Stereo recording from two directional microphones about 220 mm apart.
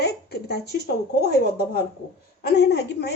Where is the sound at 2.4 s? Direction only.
50° left (ahead or behind).